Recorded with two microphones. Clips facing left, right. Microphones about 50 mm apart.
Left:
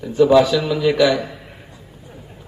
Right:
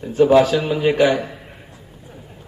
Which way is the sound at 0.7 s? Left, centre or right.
Right.